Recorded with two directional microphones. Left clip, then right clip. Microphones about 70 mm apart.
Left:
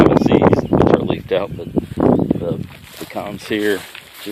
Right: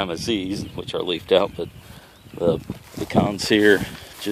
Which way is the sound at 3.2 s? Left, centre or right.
Right.